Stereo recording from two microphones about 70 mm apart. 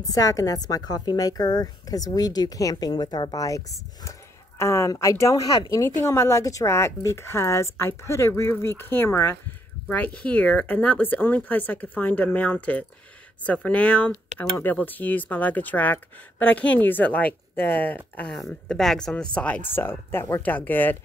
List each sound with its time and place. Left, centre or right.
0.0 s a woman's voice: left
3.4 s speech: left
6.0 s a woman's voice: left
9.8 s speech: left
18.3 s speech: centre
19.7 s a woman's voice: left
20.4 s speech: left